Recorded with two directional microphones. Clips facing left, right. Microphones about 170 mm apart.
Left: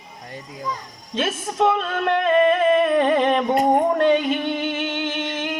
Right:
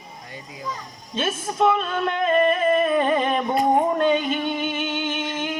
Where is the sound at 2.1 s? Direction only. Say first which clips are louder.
Left 3 dB; 70° left (ahead or behind).